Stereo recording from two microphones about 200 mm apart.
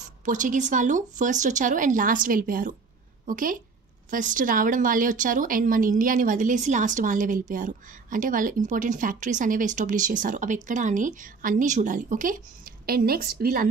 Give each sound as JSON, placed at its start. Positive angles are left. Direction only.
{"t": 0.2, "sound": "a woman's voice", "side_deg": -40}